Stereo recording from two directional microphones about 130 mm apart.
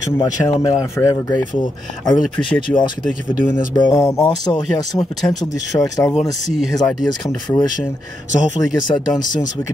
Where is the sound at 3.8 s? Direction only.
25° left (ahead or behind).